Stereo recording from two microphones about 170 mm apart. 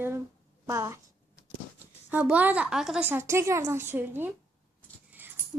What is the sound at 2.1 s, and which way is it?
A woman's voice, 10° right (ahead or behind).